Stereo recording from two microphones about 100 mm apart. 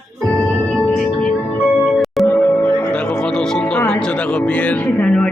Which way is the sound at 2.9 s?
10° left (ahead or behind).